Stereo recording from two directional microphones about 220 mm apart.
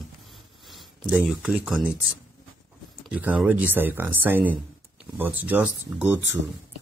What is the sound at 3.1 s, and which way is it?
Speech, 5° right (ahead or behind).